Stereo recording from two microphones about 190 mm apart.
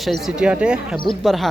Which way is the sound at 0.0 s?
Centre (ahead or behind).